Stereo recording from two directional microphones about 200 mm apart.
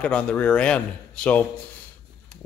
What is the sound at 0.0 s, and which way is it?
Speech, 5° left (ahead or behind).